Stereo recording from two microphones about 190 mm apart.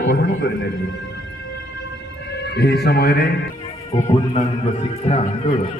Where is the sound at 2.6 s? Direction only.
60° left (ahead or behind).